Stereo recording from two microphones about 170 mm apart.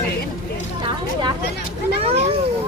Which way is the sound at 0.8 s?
25° right (ahead or behind).